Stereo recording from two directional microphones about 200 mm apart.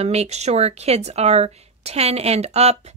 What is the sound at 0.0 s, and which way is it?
Speech, 30° right (ahead or behind).